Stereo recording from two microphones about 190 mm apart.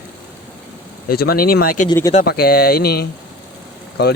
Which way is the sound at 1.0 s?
55° left (ahead or behind).